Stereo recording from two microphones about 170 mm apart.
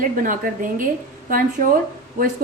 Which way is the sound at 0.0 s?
50° right (ahead or behind).